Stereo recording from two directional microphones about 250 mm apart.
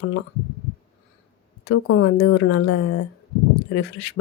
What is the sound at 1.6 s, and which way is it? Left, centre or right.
A woman's voice, left.